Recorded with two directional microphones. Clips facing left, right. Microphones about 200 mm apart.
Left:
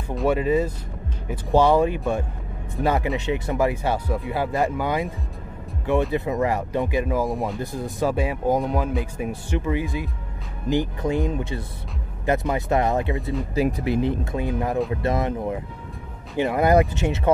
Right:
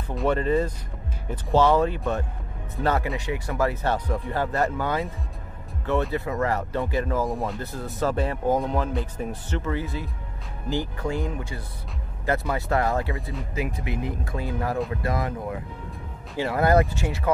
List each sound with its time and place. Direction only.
0.1 s speech: 5° left (ahead or behind)
6.1 s speech: 20° left (ahead or behind)
13.6 s speech: 35° left (ahead or behind)